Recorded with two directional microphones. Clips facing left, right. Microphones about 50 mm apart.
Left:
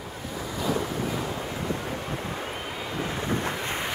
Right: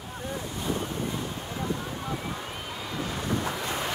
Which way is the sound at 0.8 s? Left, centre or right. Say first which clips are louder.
Left 3 dB; left.